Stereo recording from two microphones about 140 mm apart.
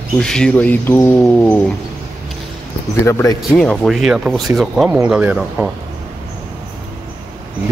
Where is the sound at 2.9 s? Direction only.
20° left (ahead or behind).